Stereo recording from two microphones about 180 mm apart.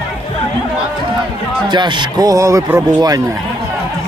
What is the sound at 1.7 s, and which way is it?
Speech, 25° right (ahead or behind).